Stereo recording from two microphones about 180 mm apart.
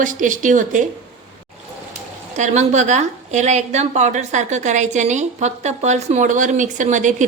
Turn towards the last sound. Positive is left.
turn(degrees=-45)  # may be behind; listen again after turning